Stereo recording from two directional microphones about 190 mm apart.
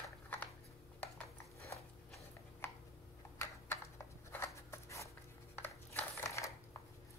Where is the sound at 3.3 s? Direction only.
15° left (ahead or behind).